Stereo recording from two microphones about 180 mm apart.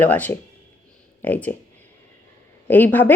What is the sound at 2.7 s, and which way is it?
Speech, 10° left (ahead or behind).